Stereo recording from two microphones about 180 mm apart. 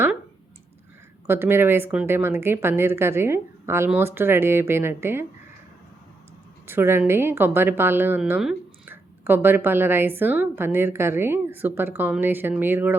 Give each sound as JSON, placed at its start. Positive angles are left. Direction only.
{"t": 1.3, "sound": "a woman's voice", "side_deg": -10}
{"t": 6.7, "sound": "a woman's voice", "side_deg": -15}